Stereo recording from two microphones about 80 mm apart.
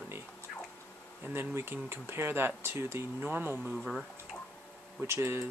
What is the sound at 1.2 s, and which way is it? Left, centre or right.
Speech, right.